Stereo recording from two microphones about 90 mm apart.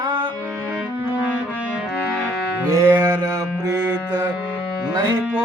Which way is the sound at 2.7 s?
30° right (ahead or behind).